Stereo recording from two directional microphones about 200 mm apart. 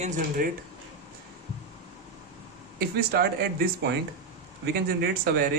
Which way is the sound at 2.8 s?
50° right (ahead or behind).